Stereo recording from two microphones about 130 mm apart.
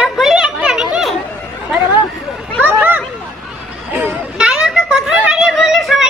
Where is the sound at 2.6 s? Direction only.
15° right (ahead or behind).